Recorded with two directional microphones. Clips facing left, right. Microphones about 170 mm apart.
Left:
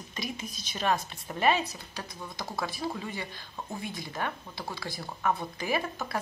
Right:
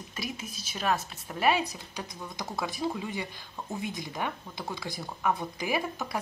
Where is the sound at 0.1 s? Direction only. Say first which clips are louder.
Left 1 dB; 5° right (ahead or behind).